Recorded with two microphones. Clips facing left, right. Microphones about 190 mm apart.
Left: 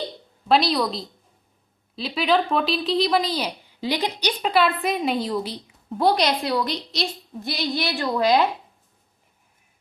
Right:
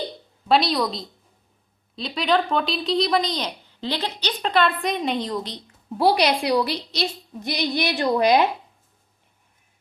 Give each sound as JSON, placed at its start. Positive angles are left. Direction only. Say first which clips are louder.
{"t": 0.4, "sound": "speech", "louder": "even", "side_deg": 0}
{"t": 6.0, "sound": "a woman's voice", "louder": "right 1 dB", "side_deg": -10}
{"t": 7.3, "sound": "a woman's voice", "louder": "right 2 dB", "side_deg": -15}